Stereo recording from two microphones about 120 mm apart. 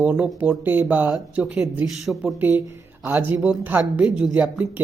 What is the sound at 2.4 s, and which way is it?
Speech, 15° right (ahead or behind).